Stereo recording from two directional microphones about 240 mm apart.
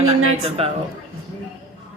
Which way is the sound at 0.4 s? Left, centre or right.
Right.